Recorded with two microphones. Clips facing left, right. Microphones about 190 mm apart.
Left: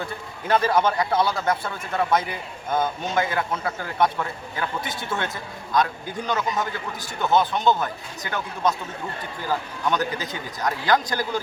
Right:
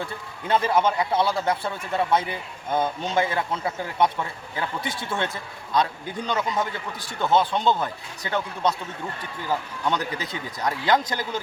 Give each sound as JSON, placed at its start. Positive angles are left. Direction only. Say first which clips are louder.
{"t": 0.0, "sound": "a man's voice", "louder": "left 1 dB", "side_deg": -25}
{"t": 9.8, "sound": "a man's voice", "louder": "left 2 dB", "side_deg": -25}